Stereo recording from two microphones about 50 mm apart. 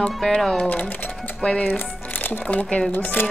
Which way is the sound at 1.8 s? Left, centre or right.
Left.